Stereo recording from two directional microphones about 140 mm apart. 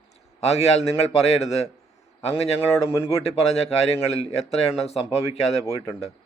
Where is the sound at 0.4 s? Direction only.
50° left (ahead or behind).